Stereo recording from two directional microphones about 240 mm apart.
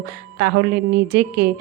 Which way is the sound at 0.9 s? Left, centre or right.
Right.